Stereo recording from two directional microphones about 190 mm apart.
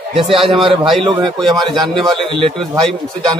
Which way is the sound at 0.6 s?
25° right (ahead or behind).